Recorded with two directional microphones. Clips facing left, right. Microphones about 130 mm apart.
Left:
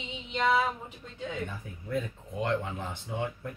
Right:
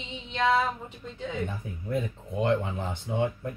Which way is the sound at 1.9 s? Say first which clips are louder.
Right 2 dB; 20° right (ahead or behind).